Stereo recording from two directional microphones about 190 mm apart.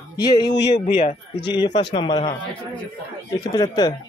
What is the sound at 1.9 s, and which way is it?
Speech, 25° left (ahead or behind).